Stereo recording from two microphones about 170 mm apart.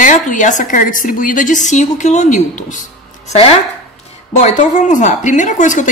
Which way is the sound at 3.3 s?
35° left (ahead or behind).